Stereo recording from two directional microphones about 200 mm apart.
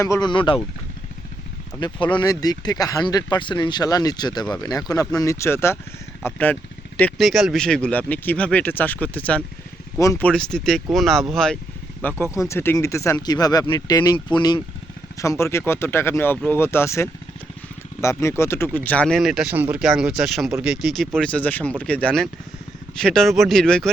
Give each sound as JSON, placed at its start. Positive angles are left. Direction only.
{"t": 0.0, "sound": "speech", "side_deg": 20}
{"t": 1.8, "sound": "speech", "side_deg": 25}
{"t": 12.2, "sound": "speech", "side_deg": 15}